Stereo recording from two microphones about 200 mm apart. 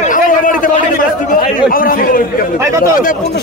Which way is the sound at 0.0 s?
40° left (ahead or behind).